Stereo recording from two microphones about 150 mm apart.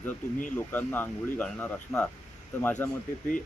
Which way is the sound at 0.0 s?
10° left (ahead or behind).